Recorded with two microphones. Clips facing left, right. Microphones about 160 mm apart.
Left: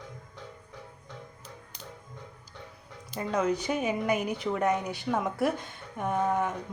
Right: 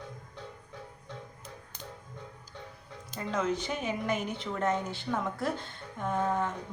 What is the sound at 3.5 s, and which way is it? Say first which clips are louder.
A woman's voice: left 4 dB; 5° left (ahead or behind).